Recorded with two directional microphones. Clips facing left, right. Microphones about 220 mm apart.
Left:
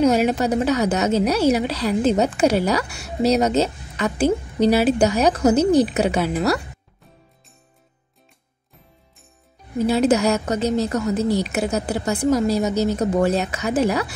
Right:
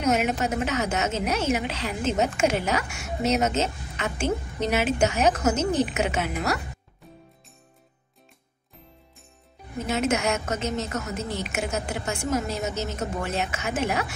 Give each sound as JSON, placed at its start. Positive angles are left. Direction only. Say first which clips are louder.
{"t": 0.0, "sound": "a woman's voice", "louder": "left 7 dB", "side_deg": 35}
{"t": 9.8, "sound": "a woman's voice", "louder": "left 8 dB", "side_deg": 35}